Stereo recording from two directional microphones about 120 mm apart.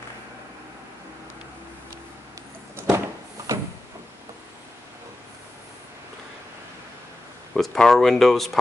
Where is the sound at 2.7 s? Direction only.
20° right (ahead or behind).